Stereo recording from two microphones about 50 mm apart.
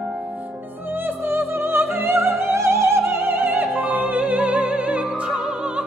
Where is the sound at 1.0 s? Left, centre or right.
Right.